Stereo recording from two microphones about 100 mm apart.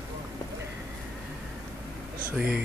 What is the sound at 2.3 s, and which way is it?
Speech, 10° right (ahead or behind).